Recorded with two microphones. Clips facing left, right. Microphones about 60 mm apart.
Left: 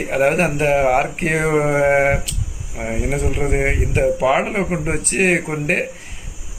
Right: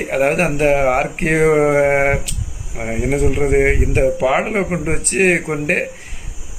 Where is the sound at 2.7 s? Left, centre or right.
Right.